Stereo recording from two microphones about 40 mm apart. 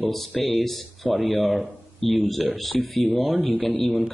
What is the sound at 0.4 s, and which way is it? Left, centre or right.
Speech, centre.